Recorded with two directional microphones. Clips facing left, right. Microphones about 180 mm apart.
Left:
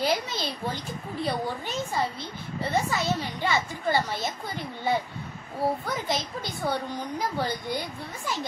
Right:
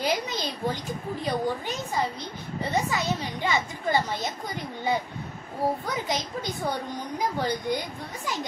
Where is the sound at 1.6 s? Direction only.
15° right (ahead or behind).